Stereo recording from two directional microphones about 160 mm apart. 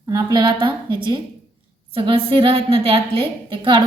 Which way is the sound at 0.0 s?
25° right (ahead or behind).